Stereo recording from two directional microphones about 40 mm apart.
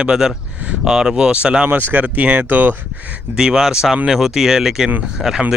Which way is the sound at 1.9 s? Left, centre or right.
Right.